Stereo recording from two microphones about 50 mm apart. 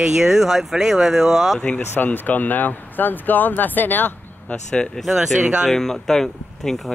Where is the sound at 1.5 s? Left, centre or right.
Left.